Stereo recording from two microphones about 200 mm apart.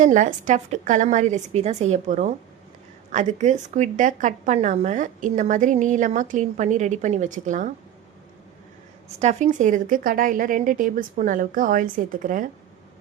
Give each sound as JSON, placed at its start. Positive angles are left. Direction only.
{"t": 0.0, "sound": "a woman's voice", "side_deg": -40}
{"t": 9.0, "sound": "a woman's voice", "side_deg": -35}